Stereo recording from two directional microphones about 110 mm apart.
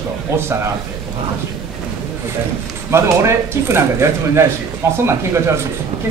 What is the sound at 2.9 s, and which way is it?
Speech, 25° right (ahead or behind).